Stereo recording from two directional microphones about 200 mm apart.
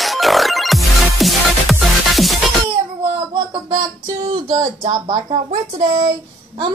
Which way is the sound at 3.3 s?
25° right (ahead or behind).